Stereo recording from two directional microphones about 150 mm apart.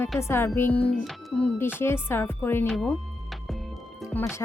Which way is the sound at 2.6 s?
Centre (ahead or behind).